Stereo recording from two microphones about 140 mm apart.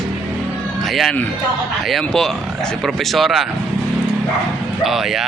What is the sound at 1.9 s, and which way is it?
Speech, 5° left (ahead or behind).